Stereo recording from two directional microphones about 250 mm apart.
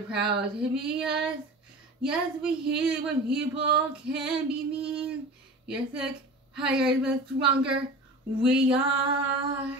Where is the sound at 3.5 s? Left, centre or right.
Right.